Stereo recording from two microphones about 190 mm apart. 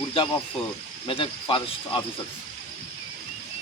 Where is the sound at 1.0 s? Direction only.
30° left (ahead or behind).